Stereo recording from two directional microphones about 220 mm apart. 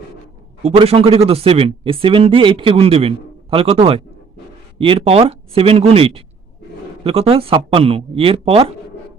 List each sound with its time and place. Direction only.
0.6 s speech: 25° right (ahead or behind)